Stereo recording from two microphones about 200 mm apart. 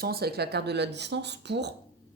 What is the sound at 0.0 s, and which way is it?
A woman's voice, 50° right (ahead or behind).